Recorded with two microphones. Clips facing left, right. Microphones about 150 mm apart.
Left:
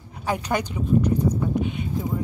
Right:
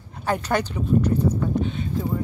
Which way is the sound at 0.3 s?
10° left (ahead or behind).